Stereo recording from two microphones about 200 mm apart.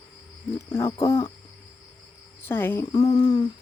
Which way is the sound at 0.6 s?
15° left (ahead or behind).